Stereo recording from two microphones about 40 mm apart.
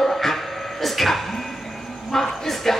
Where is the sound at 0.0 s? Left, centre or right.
Centre.